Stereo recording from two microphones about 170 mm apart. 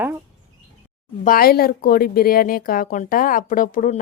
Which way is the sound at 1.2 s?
60° left (ahead or behind).